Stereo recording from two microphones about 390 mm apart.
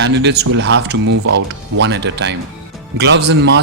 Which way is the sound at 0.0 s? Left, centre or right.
Right.